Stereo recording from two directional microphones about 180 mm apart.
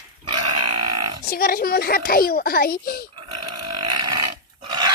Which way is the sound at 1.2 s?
55° left (ahead or behind).